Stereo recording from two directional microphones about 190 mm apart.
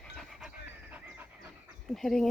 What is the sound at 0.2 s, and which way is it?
Pant, centre (ahead or behind).